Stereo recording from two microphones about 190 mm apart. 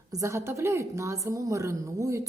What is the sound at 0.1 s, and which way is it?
A woman's voice, 15° right (ahead or behind).